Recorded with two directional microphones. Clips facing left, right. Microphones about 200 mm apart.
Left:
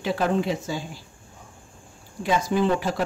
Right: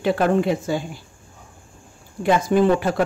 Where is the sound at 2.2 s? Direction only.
55° right (ahead or behind).